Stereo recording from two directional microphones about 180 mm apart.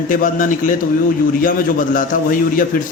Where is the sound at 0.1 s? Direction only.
50° left (ahead or behind).